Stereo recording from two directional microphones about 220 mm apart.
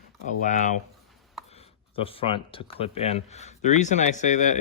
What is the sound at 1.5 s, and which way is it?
Speech, 25° left (ahead or behind).